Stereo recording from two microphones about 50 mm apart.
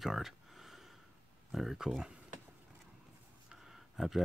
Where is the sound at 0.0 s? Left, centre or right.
Centre.